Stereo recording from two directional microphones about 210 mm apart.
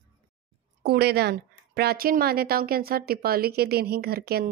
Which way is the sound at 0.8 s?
50° right (ahead or behind).